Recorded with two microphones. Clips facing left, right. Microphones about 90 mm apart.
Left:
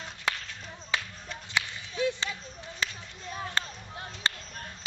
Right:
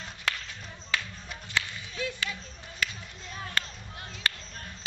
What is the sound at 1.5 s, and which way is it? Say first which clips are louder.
Whip: even; 25° left (ahead or behind).